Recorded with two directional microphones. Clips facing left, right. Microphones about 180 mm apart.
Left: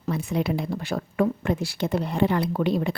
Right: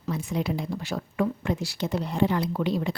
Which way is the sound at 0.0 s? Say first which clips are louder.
Left 3 dB; 60° left (ahead or behind).